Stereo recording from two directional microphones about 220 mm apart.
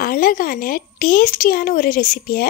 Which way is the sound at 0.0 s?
40° left (ahead or behind).